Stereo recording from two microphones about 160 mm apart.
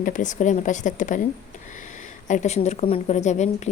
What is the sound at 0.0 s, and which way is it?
A woman's voice, 55° left (ahead or behind).